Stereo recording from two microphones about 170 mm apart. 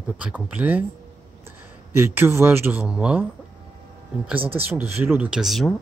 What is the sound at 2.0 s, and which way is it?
Speech, 15° right (ahead or behind).